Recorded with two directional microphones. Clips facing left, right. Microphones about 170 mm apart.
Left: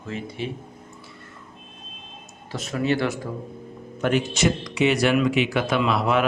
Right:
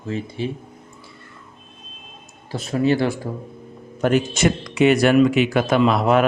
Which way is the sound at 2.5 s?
30° right (ahead or behind).